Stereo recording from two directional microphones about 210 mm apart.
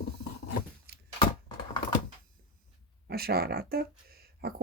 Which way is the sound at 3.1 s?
50° right (ahead or behind).